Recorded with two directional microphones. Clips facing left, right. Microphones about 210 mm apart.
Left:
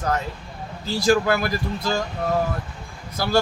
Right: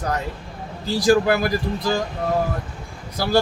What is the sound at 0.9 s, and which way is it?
Speech, 15° right (ahead or behind).